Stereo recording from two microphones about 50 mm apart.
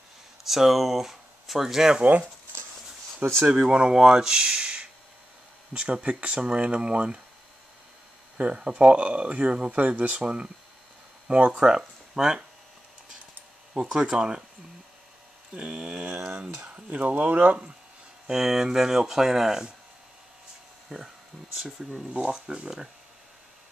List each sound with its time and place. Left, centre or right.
0.4 s speech: centre
2.0 s speech: right
3.4 s speech: centre
8.4 s speech: right
10.2 s speech: centre
13.7 s speech: centre
15.5 s speech: centre
16.6 s speech: right
18.2 s speech: centre
20.9 s speech: centre
22.1 s speech: centre